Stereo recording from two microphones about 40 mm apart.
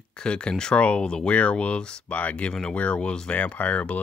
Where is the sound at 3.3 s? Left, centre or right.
Left.